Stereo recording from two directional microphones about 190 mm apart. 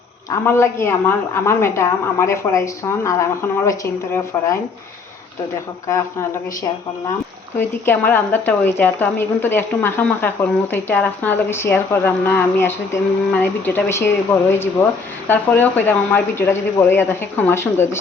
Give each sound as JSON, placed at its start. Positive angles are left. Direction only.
{"t": 0.3, "sound": "a woman's voice", "side_deg": 15}
{"t": 5.9, "sound": "a woman's voice", "side_deg": 15}
{"t": 7.9, "sound": "a woman's voice", "side_deg": 10}